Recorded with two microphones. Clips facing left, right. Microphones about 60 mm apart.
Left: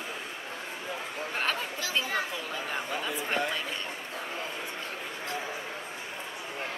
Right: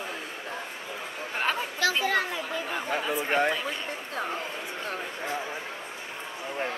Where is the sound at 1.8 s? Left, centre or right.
Right.